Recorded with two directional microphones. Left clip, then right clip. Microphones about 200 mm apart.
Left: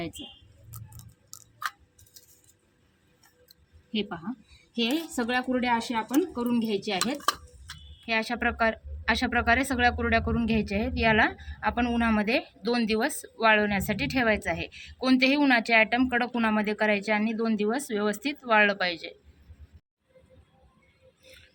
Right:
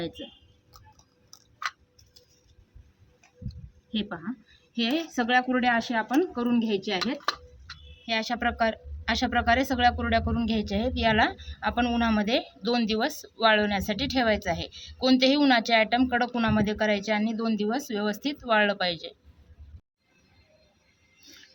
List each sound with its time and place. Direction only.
5.1 s speech: 20° left (ahead or behind)
8.0 s speech: 10° right (ahead or behind)